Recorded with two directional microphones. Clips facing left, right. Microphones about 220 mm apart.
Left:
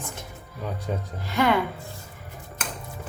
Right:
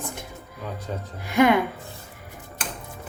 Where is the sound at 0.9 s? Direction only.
15° left (ahead or behind).